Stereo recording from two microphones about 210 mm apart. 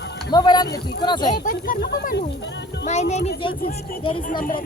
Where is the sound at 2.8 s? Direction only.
35° left (ahead or behind).